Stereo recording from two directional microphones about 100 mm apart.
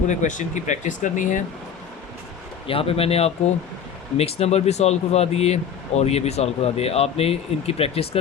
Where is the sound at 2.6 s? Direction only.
70° left (ahead or behind).